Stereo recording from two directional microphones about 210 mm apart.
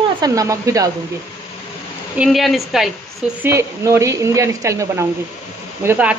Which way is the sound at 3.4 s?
15° right (ahead or behind).